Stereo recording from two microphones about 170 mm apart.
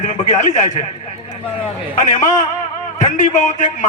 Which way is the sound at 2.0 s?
45° left (ahead or behind).